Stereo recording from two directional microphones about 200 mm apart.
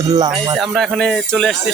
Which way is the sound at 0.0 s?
20° right (ahead or behind).